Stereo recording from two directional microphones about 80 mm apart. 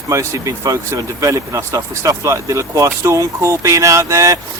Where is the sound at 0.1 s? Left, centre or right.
Right.